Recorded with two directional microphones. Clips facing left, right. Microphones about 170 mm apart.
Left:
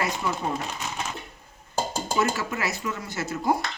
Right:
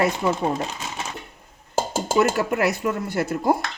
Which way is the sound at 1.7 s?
75° right (ahead or behind).